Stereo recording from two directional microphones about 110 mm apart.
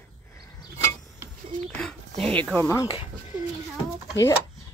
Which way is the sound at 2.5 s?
25° left (ahead or behind).